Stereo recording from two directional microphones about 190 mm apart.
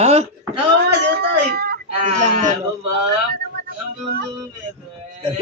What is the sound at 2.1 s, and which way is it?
Speech, 40° right (ahead or behind).